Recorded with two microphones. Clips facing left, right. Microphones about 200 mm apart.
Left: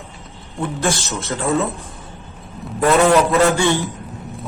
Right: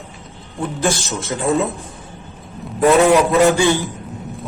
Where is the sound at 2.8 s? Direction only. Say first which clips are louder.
Right 2 dB; 15° right (ahead or behind).